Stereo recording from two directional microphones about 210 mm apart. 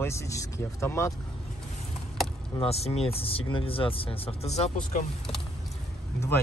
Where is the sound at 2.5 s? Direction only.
30° left (ahead or behind).